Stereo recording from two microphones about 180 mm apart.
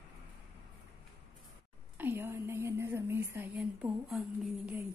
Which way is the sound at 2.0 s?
10° right (ahead or behind).